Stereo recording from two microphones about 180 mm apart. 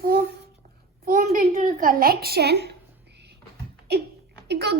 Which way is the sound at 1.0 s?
50° right (ahead or behind).